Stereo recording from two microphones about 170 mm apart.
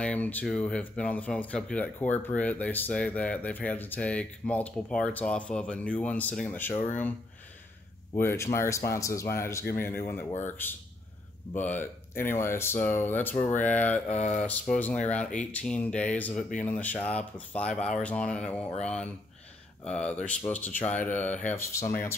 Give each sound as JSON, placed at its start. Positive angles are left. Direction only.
{"t": 0.0, "sound": "speech", "side_deg": 10}
{"t": 8.2, "sound": "speech", "side_deg": 15}
{"t": 14.0, "sound": "speech", "side_deg": 40}
{"t": 14.4, "sound": "speech", "side_deg": 10}